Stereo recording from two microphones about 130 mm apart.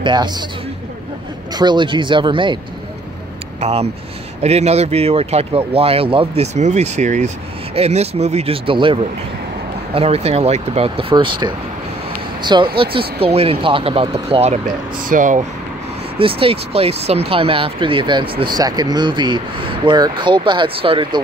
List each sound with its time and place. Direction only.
0.0 s speech: 35° right (ahead or behind)
1.5 s speech: 35° right (ahead or behind)
3.6 s speech: 50° right (ahead or behind)
9.9 s speech: 50° right (ahead or behind)
15.0 s speech: 80° right
16.2 s speech: 45° right (ahead or behind)